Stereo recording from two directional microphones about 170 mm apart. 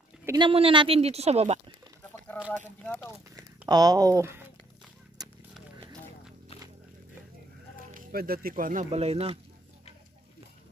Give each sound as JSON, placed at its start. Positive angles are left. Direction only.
{"t": 0.4, "sound": "speech", "side_deg": -30}
{"t": 2.3, "sound": "a sound", "side_deg": 10}
{"t": 2.8, "sound": "speech", "side_deg": 5}
{"t": 3.3, "sound": "speech", "side_deg": -20}
{"t": 5.2, "sound": "a sound", "side_deg": -25}
{"t": 7.9, "sound": "speech", "side_deg": -60}
{"t": 8.9, "sound": "speech", "side_deg": -40}